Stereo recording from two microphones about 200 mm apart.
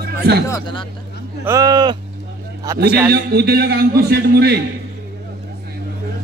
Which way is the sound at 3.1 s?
50° right (ahead or behind).